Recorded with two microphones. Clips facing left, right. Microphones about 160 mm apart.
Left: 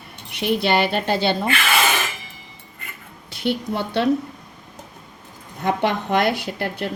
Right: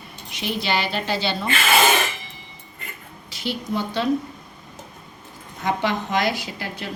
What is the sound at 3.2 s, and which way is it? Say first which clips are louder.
Speech: left 4 dB; 60° left (ahead or behind).